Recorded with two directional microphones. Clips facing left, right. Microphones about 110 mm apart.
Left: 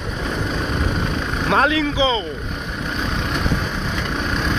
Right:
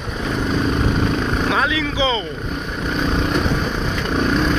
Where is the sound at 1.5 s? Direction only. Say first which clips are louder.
Left 7 dB; 45° left (ahead or behind).